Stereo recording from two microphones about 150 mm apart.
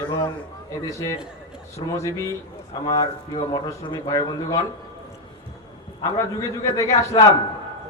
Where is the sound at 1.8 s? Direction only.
30° left (ahead or behind).